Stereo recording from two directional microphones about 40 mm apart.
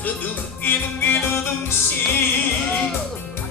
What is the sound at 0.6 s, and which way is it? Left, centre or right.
Music, left.